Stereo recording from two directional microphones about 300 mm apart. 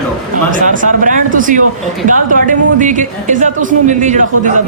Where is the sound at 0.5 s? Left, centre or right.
Right.